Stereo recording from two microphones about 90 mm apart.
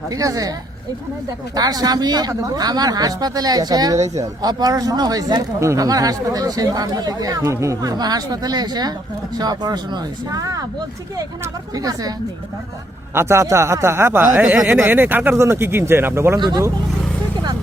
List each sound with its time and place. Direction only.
0.1 s speech: 40° right (ahead or behind)
1.5 s speech: 45° right (ahead or behind)
13.1 s speech: 30° right (ahead or behind)
14.3 s speech: 10° right (ahead or behind)
14.7 s speech: 25° right (ahead or behind)
16.4 s speech: 45° right (ahead or behind)